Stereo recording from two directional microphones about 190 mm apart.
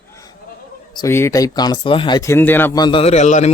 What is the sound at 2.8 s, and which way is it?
Speech, 30° left (ahead or behind).